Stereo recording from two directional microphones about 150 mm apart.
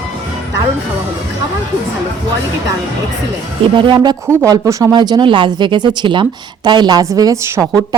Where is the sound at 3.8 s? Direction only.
30° right (ahead or behind).